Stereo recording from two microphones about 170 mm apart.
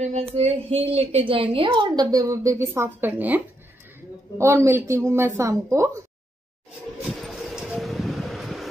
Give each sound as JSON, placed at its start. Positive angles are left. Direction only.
{"t": 0.0, "sound": "a woman's voice", "side_deg": -40}
{"t": 7.1, "sound": "vehicle", "side_deg": 0}